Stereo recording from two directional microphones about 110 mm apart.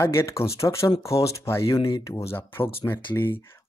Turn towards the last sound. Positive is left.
turn(degrees=20)  # may be behind; listen again after turning